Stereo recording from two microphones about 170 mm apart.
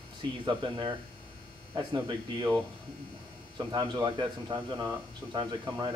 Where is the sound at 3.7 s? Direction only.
25° right (ahead or behind).